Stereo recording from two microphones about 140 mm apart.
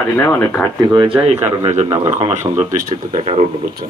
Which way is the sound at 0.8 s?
35° right (ahead or behind).